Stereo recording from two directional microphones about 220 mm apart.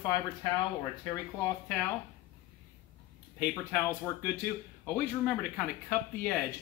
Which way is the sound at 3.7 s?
10° left (ahead or behind).